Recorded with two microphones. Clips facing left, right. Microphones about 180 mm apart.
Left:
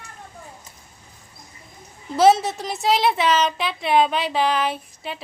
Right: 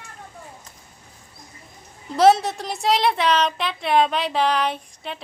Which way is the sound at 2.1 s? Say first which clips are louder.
Even; centre (ahead or behind).